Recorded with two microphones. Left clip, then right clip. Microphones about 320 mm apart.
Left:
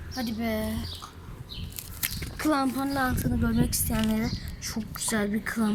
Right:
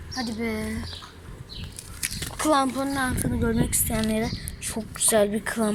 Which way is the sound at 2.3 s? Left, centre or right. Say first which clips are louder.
Right 4 dB; centre.